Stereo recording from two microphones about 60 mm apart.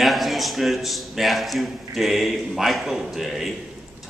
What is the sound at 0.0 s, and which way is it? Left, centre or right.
A man's voice, centre.